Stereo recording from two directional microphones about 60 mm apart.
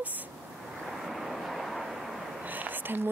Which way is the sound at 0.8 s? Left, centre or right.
Centre.